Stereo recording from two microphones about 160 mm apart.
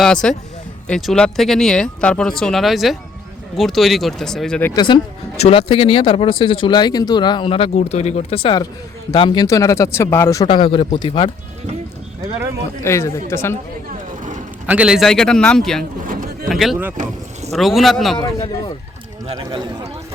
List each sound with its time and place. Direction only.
0.0 s speech: 5° left (ahead or behind)
4.7 s speech: 25° left (ahead or behind)
10.4 s speech: 30° left (ahead or behind)
12.8 s speech: 15° left (ahead or behind)
14.7 s speech: 5° right (ahead or behind)
15.8 s a sound: 60° right (ahead or behind)
16.5 s speech: centre (ahead or behind)
18.2 s speech: 20° left (ahead or behind)
19.4 s a man's voice: 25° right (ahead or behind)